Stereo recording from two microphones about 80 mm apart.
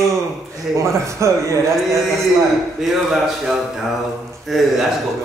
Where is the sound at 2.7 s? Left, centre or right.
Centre.